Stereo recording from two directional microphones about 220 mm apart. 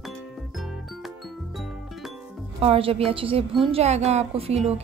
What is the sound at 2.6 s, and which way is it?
A woman's voice, 25° right (ahead or behind).